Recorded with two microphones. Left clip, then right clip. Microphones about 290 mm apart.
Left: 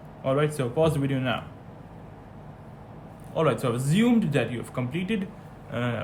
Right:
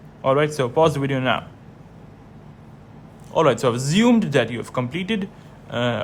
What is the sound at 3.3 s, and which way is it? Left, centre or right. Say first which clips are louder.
Speech: right 7 dB; centre.